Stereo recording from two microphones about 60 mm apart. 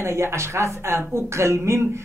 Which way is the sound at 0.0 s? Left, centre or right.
Right.